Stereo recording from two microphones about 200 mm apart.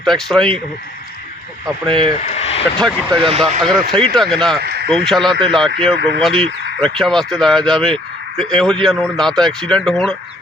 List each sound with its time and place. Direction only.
0.0 s speech: centre (ahead or behind)
2.2 s a sound: 30° left (ahead or behind)
2.7 s speech: centre (ahead or behind)
3.2 s speech: 30° right (ahead or behind)
3.6 s speech: centre (ahead or behind)
4.6 s a sound: 50° right (ahead or behind)
4.9 s speech: centre (ahead or behind)